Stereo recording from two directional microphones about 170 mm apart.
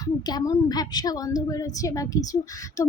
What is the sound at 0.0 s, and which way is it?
A woman's voice, 20° left (ahead or behind).